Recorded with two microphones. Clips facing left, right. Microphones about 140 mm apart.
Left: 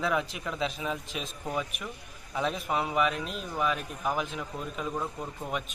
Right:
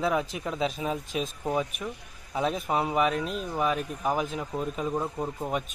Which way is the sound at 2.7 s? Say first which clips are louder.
Right 2 dB; 35° right (ahead or behind).